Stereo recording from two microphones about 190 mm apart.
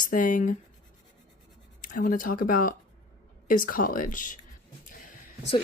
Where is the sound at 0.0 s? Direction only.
45° left (ahead or behind).